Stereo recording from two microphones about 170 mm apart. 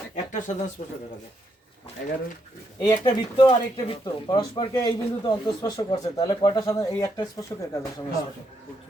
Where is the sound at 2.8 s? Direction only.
25° left (ahead or behind).